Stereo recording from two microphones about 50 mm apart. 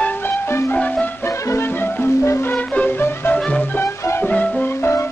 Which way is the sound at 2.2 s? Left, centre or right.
Left.